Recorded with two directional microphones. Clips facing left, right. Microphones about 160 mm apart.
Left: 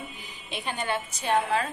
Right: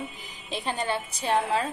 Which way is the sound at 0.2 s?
35° right (ahead or behind).